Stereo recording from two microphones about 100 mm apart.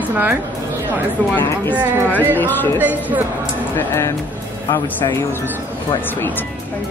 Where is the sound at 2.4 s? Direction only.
20° left (ahead or behind).